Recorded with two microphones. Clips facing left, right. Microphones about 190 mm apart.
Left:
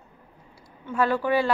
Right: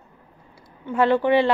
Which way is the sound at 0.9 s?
20° right (ahead or behind).